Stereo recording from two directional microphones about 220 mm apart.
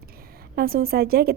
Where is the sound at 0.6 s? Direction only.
45° right (ahead or behind).